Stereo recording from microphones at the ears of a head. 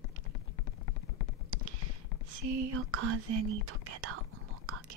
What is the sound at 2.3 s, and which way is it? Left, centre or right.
Whispering, right.